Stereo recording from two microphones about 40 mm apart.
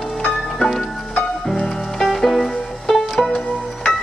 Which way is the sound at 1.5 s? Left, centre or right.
Centre.